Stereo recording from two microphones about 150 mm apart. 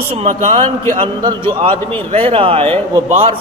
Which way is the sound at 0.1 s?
50° right (ahead or behind).